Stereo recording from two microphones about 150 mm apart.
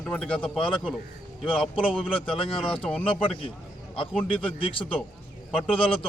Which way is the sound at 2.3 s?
35° left (ahead or behind).